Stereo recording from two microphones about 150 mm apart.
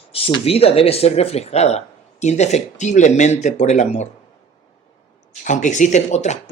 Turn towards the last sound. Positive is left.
turn(degrees=50)  # may be behind; listen again after turning